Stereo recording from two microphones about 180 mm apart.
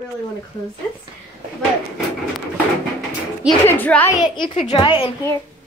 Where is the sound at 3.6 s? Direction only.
10° left (ahead or behind).